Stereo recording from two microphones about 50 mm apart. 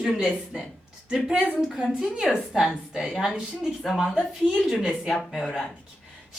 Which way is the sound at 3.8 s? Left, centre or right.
Centre.